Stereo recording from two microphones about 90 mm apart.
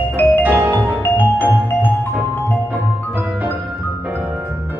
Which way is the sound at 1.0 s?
20° left (ahead or behind).